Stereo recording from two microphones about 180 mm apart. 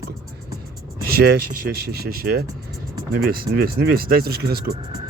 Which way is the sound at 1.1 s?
65° right (ahead or behind).